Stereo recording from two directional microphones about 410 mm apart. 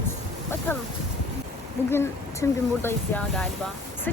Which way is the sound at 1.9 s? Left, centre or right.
Centre.